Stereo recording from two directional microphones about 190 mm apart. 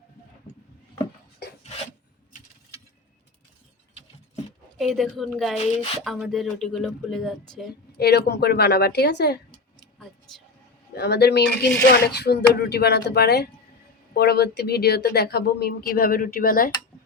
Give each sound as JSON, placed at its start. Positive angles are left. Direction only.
{"t": 4.8, "sound": "speech", "side_deg": 0}
{"t": 5.5, "sound": "speech", "side_deg": 30}
{"t": 6.0, "sound": "speech", "side_deg": 0}
{"t": 7.9, "sound": "speech", "side_deg": 55}
{"t": 10.9, "sound": "speech", "side_deg": 60}